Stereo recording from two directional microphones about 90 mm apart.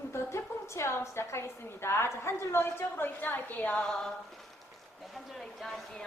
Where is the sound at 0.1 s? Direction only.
30° left (ahead or behind); by 4.1 s 10° left (ahead or behind).